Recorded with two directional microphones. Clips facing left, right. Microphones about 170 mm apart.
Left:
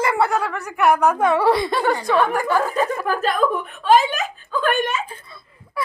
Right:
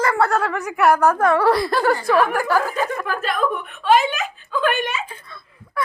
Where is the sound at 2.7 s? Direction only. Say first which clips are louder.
Left 2 dB; 35° left (ahead or behind).